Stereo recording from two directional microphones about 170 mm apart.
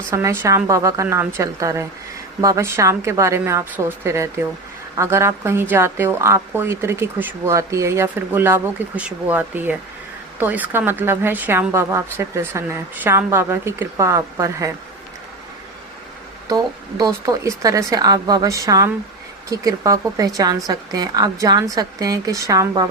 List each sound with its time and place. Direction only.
0.1 s a woman's voice: 15° right (ahead or behind)
16.5 s a woman's voice: 20° right (ahead or behind)